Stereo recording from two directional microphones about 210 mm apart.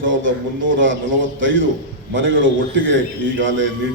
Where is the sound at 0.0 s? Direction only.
65° right (ahead or behind).